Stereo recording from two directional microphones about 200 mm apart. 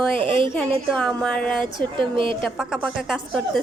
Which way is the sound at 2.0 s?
25° right (ahead or behind).